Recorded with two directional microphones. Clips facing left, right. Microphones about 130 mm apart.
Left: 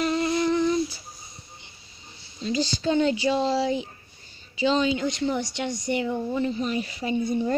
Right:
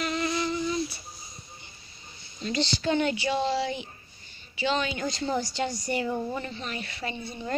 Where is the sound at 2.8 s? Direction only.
25° left (ahead or behind).